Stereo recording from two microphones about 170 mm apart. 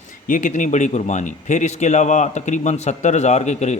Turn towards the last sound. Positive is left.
turn(degrees=40)  # may be behind; listen again after turning